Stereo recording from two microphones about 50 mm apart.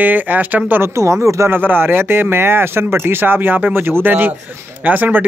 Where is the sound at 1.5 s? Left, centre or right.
Right.